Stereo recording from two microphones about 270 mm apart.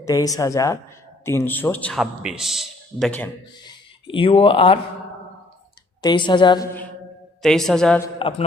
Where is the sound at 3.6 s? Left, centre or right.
Centre.